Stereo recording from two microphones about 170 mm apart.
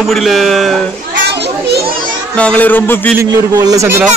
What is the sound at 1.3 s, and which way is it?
Children playing, 70° right (ahead or behind).